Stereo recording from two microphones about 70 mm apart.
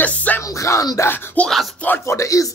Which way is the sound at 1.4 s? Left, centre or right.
Left.